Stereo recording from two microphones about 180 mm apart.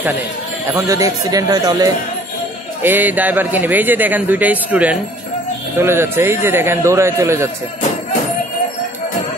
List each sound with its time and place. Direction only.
0.7 s speech: 20° right (ahead or behind)
2.8 s a man's voice: 10° right (ahead or behind)